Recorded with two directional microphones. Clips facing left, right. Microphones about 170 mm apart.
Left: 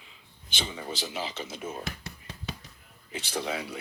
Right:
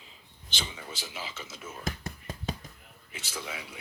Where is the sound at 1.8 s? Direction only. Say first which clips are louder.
Right 2 dB; 45° right (ahead or behind).